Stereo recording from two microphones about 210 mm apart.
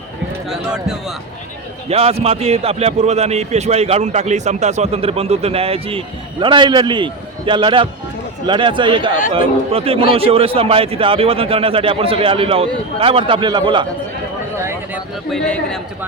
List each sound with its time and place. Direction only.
0.7 s a man's voice: centre (ahead or behind)
1.9 s a man's voice: 30° right (ahead or behind)
14.6 s a sound: 10° right (ahead or behind)
15.3 s a man's voice: 5° left (ahead or behind)